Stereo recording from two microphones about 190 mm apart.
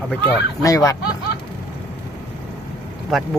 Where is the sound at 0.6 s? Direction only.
20° left (ahead or behind).